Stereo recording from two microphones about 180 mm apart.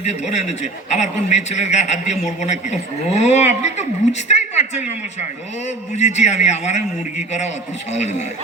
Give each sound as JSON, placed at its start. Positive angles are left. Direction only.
{"t": 0.0, "sound": "a man's voice", "side_deg": 40}